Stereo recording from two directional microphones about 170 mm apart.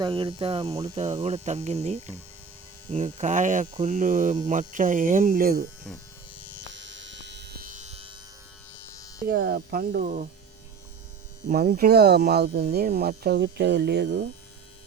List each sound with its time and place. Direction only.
0.0 s speech: 30° right (ahead or behind); by 5.6 s 60° right (ahead or behind)
6.7 s electric shaver: 90° right; by 8.1 s 40° right (ahead or behind)
8.9 s electric shaver: 20° left (ahead or behind)
9.2 s speech: 65° right (ahead or behind); by 10.2 s 45° right (ahead or behind)
11.4 s speech: 55° right (ahead or behind); by 14.3 s 85° right